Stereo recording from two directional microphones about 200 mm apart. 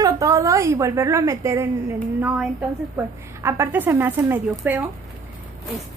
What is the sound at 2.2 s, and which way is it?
A woman's voice, 5° right (ahead or behind).